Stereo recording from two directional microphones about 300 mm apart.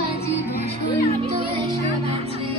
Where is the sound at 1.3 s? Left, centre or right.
Centre.